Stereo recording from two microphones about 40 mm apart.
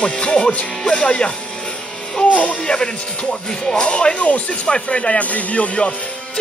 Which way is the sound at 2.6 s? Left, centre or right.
Left.